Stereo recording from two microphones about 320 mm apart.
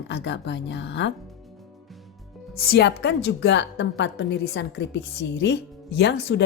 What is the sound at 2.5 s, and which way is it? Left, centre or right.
A woman's voice, left.